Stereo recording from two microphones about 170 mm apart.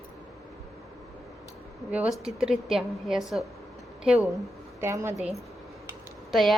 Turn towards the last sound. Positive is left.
turn(degrees=0)  # may be behind; listen again after turning